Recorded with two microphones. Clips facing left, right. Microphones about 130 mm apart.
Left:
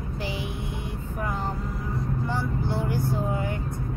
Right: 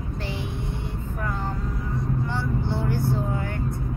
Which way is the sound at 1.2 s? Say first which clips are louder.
Even; 15° left (ahead or behind).